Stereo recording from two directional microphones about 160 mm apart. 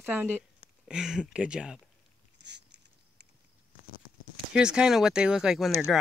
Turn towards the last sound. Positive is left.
turn(degrees=0)  # may be behind; listen again after turning